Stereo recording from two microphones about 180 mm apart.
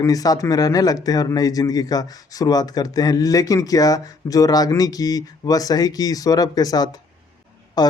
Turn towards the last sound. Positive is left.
turn(degrees=20)  # may be behind; listen again after turning